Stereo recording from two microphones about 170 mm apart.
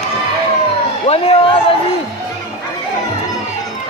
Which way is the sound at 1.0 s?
35° left (ahead or behind).